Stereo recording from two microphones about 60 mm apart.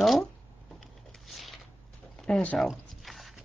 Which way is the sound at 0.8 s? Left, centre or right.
Centre.